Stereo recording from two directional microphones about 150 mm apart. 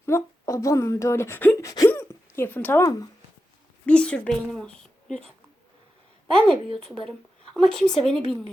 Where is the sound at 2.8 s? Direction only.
25° left (ahead or behind).